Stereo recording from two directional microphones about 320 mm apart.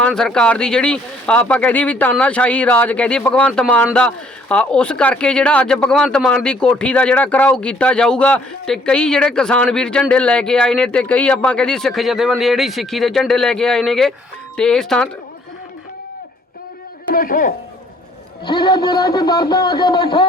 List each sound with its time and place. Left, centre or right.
0.0 s speech: centre
17.1 s a man's voice: left
18.4 s speech: centre